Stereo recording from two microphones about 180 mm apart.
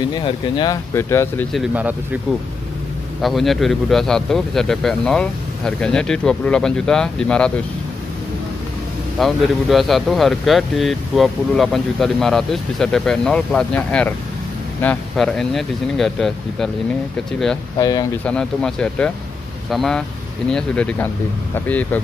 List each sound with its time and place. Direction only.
0.1 s speech: 25° left (ahead or behind)
0.9 s speech: 15° left (ahead or behind)
1.5 s speech: 5° right (ahead or behind)
3.2 s speech: centre (ahead or behind)
9.2 s speech: centre (ahead or behind)
17.7 s speech: 20° left (ahead or behind)
18.2 s speech: 5° left (ahead or behind)